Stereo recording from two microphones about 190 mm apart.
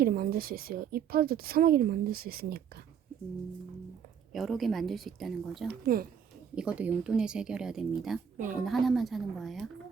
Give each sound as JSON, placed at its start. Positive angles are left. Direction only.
{"t": 0.0, "sound": "speech", "side_deg": -50}
{"t": 4.3, "sound": "speech", "side_deg": 0}
{"t": 5.6, "sound": "speech", "side_deg": -50}
{"t": 6.6, "sound": "speech", "side_deg": -5}